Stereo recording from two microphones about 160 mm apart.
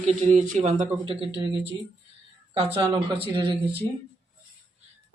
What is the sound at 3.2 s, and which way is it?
Speech, 30° right (ahead or behind).